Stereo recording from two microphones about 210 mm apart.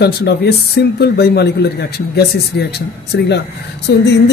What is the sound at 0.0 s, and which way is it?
Speech, 50° left (ahead or behind).